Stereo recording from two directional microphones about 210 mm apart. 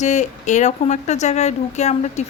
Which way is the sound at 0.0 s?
35° left (ahead or behind).